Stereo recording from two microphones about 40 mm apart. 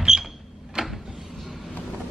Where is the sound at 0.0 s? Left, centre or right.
Centre.